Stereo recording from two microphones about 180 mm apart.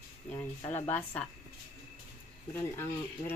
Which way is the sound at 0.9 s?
10° left (ahead or behind).